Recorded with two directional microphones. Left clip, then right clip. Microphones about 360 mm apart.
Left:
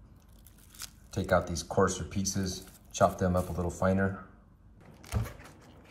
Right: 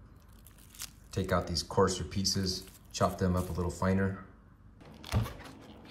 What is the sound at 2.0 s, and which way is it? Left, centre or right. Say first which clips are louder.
Speech: right 2 dB; right.